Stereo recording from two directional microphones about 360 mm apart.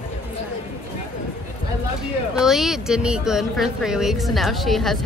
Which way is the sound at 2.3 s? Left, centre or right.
Centre.